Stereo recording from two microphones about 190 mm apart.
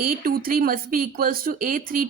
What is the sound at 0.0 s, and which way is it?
A woman's voice, 50° right (ahead or behind).